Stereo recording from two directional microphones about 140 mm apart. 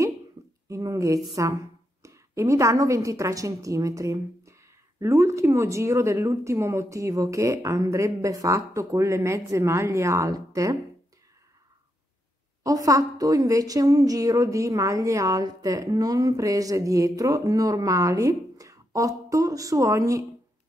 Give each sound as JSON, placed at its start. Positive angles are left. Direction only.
{"t": 0.7, "sound": "a woman's voice", "side_deg": -20}
{"t": 12.6, "sound": "a woman's voice", "side_deg": -25}